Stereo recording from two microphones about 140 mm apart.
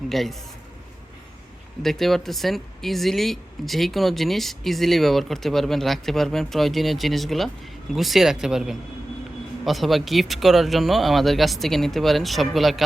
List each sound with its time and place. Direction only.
0.1 s speech: centre (ahead or behind)
1.8 s speech: centre (ahead or behind)